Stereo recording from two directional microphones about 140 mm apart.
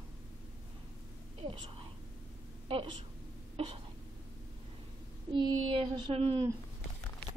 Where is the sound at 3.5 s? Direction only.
45° right (ahead or behind).